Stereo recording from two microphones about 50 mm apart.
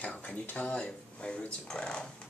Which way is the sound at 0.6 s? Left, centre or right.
Centre.